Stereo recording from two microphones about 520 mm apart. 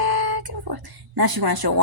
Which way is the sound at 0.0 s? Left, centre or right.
Right.